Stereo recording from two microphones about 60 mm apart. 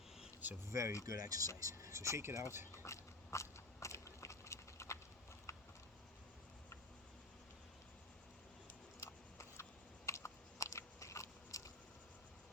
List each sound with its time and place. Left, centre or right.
0.7 s speech: right
1.0 s speech: right
1.5 s speech: right
2.7 s biting: left
5.5 s a sound: left
9.0 s typing: left
10.1 s biting: left